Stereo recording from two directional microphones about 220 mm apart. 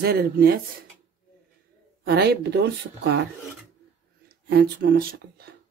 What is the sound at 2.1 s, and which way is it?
Speech, 45° right (ahead or behind).